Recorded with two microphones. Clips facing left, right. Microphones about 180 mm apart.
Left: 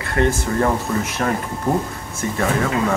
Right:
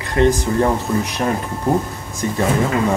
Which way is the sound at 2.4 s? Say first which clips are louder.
Right 2 dB; 20° right (ahead or behind).